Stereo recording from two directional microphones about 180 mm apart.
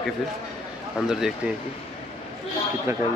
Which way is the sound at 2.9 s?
15° right (ahead or behind).